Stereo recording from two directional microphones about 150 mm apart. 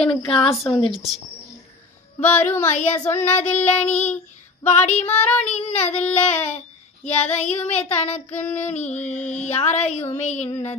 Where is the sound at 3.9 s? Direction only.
50° left (ahead or behind).